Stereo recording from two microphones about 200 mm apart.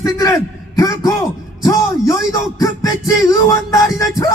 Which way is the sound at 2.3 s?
15° left (ahead or behind).